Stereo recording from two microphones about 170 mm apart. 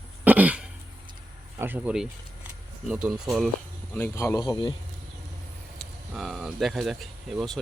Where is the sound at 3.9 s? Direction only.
15° left (ahead or behind).